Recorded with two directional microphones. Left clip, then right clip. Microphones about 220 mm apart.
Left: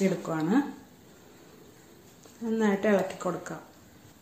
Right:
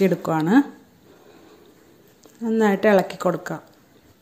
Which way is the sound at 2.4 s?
40° right (ahead or behind).